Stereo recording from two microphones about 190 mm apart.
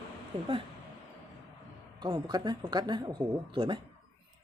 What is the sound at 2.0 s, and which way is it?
A man's voice, 20° right (ahead or behind).